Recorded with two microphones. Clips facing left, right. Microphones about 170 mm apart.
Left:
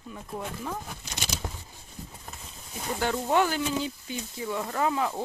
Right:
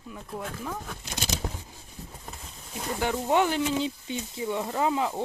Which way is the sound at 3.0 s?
15° right (ahead or behind).